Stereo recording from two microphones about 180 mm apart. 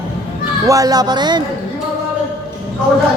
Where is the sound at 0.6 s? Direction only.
20° right (ahead or behind).